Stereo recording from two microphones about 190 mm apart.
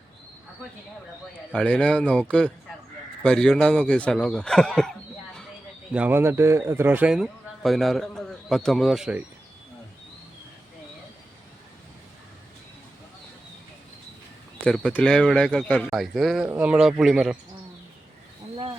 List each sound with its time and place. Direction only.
1.5 s a man's voice: 5° left (ahead or behind)
5.9 s a man's voice: 10° right (ahead or behind)
14.6 s a man's voice: 5° left (ahead or behind)
18.5 s a sound: 25° right (ahead or behind)